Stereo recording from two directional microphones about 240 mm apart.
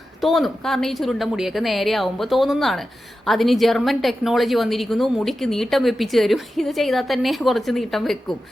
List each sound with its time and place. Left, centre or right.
0.2 s a woman's voice: centre